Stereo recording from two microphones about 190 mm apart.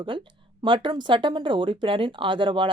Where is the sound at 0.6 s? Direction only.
25° right (ahead or behind).